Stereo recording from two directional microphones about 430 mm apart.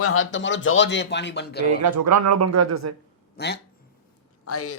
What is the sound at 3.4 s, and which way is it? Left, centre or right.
Speech, left.